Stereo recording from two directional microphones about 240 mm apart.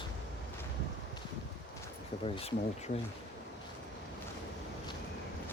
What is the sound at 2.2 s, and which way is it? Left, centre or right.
Speech, left.